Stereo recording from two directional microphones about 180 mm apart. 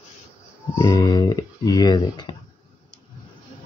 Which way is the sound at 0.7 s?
15° left (ahead or behind).